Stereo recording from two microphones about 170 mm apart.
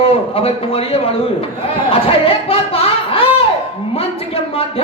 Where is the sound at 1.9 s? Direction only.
35° left (ahead or behind).